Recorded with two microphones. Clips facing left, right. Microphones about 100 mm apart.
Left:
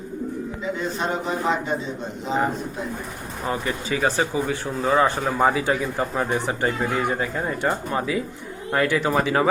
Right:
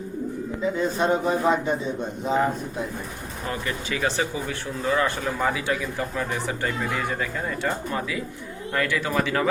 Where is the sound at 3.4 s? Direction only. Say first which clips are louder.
Left 4 dB; 25° left (ahead or behind).